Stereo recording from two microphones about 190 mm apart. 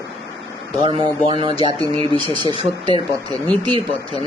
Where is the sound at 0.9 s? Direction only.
25° right (ahead or behind).